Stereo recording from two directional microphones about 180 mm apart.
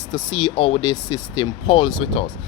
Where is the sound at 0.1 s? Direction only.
25° left (ahead or behind).